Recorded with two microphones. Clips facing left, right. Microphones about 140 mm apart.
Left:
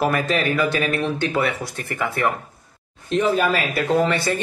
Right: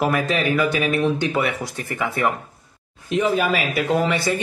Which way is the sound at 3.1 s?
5° right (ahead or behind).